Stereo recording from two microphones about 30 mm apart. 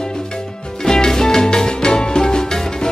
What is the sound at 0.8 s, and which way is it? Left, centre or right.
Music, centre.